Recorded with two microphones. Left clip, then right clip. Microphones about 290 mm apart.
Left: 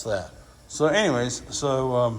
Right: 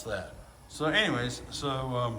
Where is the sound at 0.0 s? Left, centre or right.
Centre.